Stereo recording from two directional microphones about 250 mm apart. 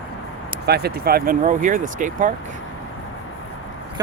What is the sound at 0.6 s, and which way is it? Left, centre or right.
Speech, right.